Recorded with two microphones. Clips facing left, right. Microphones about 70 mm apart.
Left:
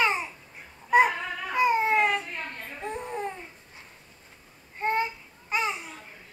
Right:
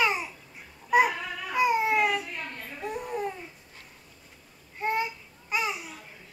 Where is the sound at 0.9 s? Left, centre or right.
Left.